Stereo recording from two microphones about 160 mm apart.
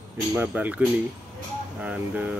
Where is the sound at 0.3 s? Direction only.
10° right (ahead or behind).